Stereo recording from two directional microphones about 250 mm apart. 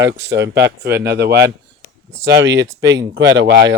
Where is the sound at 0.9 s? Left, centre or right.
Right.